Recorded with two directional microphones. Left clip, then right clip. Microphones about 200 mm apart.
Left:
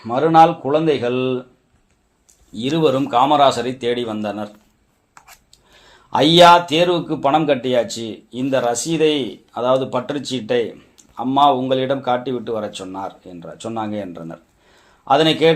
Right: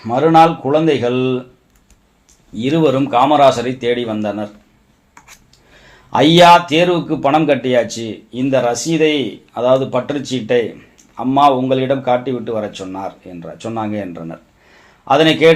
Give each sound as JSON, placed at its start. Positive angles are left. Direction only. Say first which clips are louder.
{"t": 0.0, "sound": "speech", "louder": "right 2 dB", "side_deg": 15}
{"t": 2.6, "sound": "speech", "louder": "right 3 dB", "side_deg": 30}
{"t": 6.1, "sound": "speech", "louder": "right 2 dB", "side_deg": 30}